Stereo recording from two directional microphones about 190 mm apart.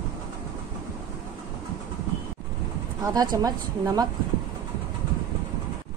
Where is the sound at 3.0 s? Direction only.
20° right (ahead or behind).